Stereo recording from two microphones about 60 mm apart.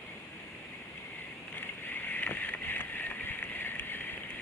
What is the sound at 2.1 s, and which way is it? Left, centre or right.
Boat, left.